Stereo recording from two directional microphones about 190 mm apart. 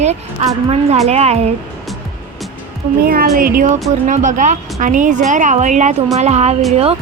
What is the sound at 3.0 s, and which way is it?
A woman's voice, 50° right (ahead or behind).